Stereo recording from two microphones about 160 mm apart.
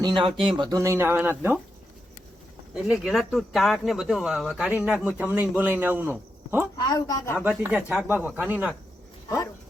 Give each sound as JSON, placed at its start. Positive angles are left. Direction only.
{"t": 0.2, "sound": "speech", "side_deg": -35}
{"t": 2.7, "sound": "speech", "side_deg": -5}
{"t": 6.7, "sound": "speech", "side_deg": 25}
{"t": 7.3, "sound": "speech", "side_deg": -10}